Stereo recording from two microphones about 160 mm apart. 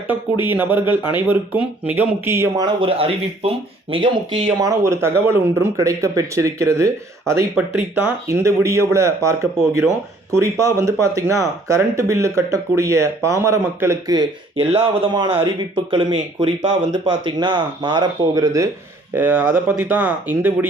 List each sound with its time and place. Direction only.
0.1 s speech: 10° right (ahead or behind)
2.6 s speech: 35° right (ahead or behind)
19.1 s speech: 10° right (ahead or behind)